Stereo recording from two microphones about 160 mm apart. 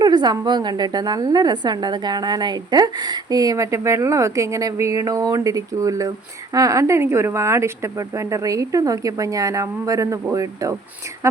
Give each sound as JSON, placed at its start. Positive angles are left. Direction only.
{"t": 0.0, "sound": "a woman's voice", "side_deg": -25}